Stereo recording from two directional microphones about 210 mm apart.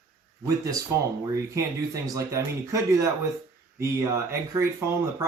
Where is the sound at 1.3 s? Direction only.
15° right (ahead or behind).